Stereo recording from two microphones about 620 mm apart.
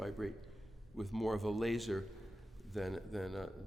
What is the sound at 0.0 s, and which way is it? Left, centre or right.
A man's voice, centre.